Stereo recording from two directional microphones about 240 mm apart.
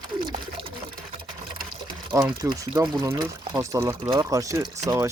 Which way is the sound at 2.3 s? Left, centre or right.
Centre.